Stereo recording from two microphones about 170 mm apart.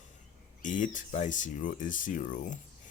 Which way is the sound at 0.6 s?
50° left (ahead or behind).